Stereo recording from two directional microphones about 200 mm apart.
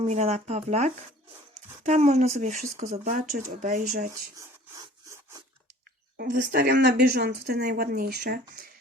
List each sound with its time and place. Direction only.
0.0 s speech: 35° right (ahead or behind)
6.1 s speech: 45° right (ahead or behind)